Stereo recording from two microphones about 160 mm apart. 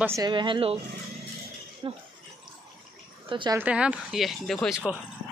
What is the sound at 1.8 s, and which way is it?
Speech, 30° right (ahead or behind).